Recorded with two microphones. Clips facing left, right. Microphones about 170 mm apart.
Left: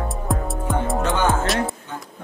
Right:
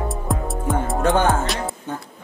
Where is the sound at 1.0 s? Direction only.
50° right (ahead or behind).